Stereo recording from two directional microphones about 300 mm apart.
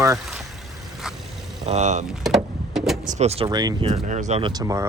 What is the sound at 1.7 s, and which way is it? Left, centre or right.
Speech, right.